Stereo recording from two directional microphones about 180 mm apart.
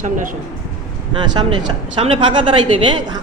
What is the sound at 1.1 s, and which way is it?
A man's voice, 25° right (ahead or behind).